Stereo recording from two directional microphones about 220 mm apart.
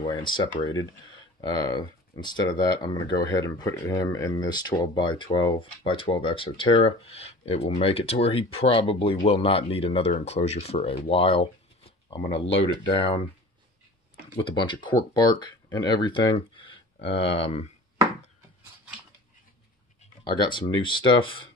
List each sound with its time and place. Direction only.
0.0 s speech: 20° left (ahead or behind)
14.3 s speech: 20° left (ahead or behind)
20.2 s speech: 20° left (ahead or behind)